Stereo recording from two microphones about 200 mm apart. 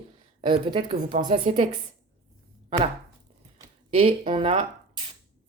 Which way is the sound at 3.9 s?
30° right (ahead or behind).